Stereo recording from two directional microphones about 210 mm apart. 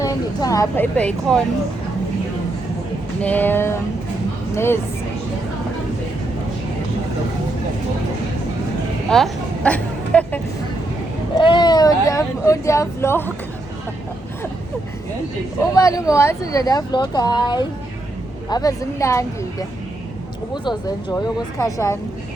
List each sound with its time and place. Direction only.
0.0 s speech: 15° left (ahead or behind)
3.2 s speech: 10° left (ahead or behind)
9.0 s a sound: centre (ahead or behind)
11.3 s speech: 20° left (ahead or behind)
15.7 s speech: 15° left (ahead or behind)
21.6 s speech: 15° left (ahead or behind)